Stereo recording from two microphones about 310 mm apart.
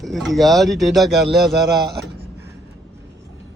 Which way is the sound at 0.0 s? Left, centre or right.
Centre.